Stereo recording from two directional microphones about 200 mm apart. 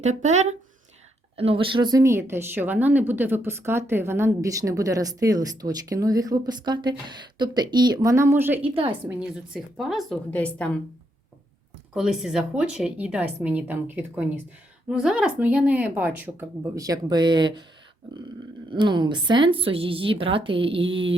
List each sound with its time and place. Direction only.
0.0 s a woman's voice: 35° right (ahead or behind); by 8.7 s 10° right (ahead or behind)
8.7 s a woman's voice: 25° right (ahead or behind)
9.0 s a woman's voice: 5° right (ahead or behind)
11.9 s a woman's voice: centre (ahead or behind); by 17.7 s 20° right (ahead or behind)
18.7 s a woman's voice: 20° right (ahead or behind)